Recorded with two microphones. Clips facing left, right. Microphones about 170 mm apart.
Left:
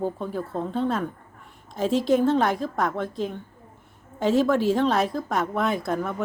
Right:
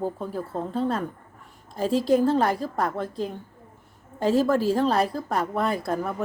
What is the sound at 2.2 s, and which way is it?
Speech, 5° right (ahead or behind).